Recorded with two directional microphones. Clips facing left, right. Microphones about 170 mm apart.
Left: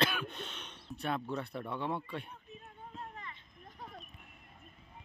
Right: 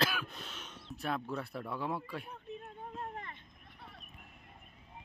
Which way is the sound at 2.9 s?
55° right (ahead or behind).